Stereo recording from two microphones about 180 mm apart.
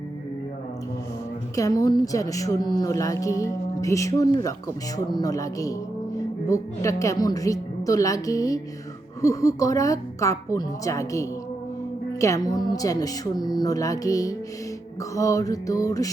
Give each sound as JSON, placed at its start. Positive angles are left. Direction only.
{"t": 1.5, "sound": "a woman's voice", "side_deg": 20}